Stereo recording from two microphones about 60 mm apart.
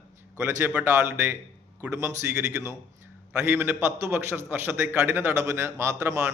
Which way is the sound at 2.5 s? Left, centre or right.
Right.